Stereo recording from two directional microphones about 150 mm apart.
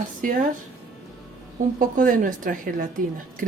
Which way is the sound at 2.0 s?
65° right (ahead or behind).